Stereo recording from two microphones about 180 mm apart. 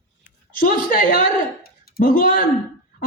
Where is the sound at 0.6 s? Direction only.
45° left (ahead or behind).